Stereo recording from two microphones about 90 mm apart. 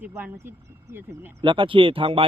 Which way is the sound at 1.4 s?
70° right (ahead or behind).